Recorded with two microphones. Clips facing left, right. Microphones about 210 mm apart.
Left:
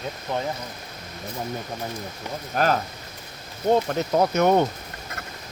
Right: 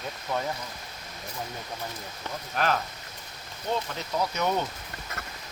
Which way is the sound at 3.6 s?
50° left (ahead or behind).